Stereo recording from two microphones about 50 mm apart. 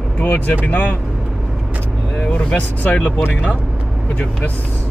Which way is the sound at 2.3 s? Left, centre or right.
Centre.